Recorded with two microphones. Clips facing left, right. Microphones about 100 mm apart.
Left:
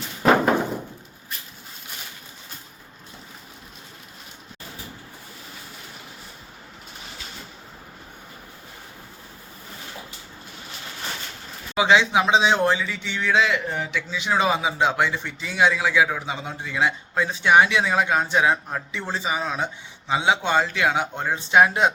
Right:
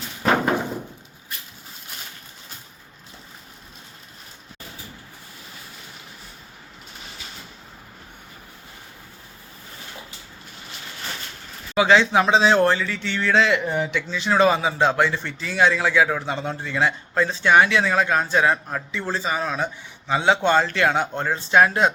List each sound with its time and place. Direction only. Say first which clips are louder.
11.7 s a man's voice: right 2 dB; 15° left (ahead or behind)